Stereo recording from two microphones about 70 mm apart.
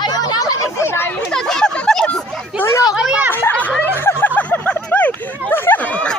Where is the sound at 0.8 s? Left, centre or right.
Left.